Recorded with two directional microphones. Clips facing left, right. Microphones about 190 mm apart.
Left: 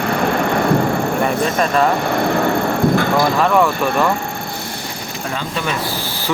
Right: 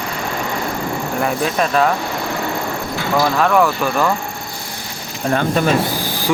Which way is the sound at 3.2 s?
Centre (ahead or behind).